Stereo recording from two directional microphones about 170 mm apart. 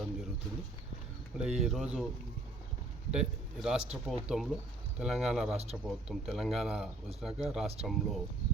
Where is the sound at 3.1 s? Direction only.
5° right (ahead or behind).